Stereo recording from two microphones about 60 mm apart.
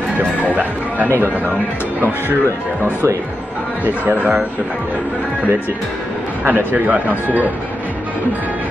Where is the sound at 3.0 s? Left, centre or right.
Right.